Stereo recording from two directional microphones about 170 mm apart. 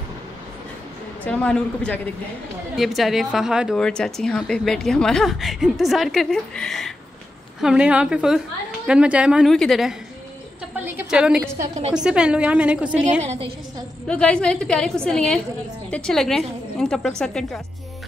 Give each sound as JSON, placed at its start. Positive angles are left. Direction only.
{"t": 1.2, "sound": "a man's voice", "side_deg": 5}
{"t": 11.0, "sound": "a woman's voice", "side_deg": -5}
{"t": 13.2, "sound": "a woman's voice", "side_deg": -40}
{"t": 14.0, "sound": "speech", "side_deg": 5}